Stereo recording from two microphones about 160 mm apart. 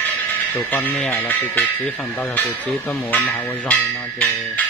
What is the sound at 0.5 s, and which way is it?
Speech, 10° left (ahead or behind).